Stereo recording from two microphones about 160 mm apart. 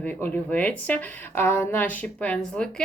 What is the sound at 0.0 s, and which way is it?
Speech, 10° left (ahead or behind).